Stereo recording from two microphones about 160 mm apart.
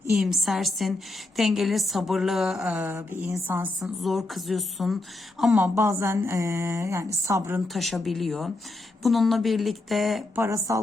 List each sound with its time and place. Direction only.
0.2 s a woman's voice: centre (ahead or behind)
3.8 s a woman's voice: centre (ahead or behind)
5.5 s a woman's voice: 15° right (ahead or behind)
7.7 s a woman's voice: centre (ahead or behind)
10.3 s speech: 20° right (ahead or behind)